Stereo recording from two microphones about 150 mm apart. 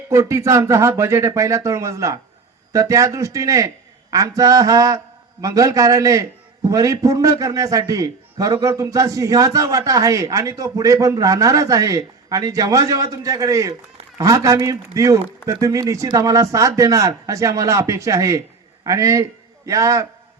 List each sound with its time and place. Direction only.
0.1 s a man's voice: 20° right (ahead or behind)